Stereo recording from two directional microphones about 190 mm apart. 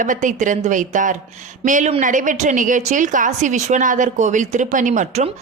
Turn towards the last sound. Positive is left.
turn(degrees=-40)  # may be behind; listen again after turning